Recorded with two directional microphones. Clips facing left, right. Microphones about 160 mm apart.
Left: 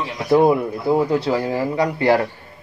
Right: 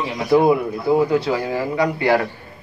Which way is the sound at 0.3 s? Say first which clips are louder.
Even; 5° right (ahead or behind).